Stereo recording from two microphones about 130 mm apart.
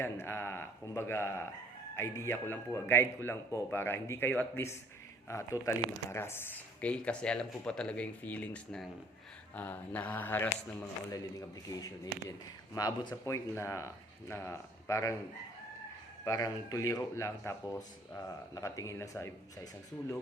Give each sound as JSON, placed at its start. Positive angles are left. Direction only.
{"t": 0.0, "sound": "speech", "side_deg": 20}
{"t": 11.1, "sound": "speech", "side_deg": 30}
{"t": 16.2, "sound": "speech", "side_deg": 30}